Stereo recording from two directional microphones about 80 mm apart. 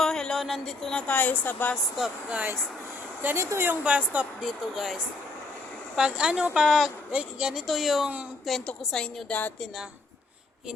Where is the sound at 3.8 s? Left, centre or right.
Centre.